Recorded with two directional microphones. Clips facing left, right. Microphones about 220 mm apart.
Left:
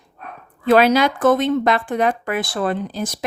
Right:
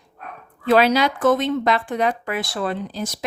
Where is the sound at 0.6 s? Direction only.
50° left (ahead or behind).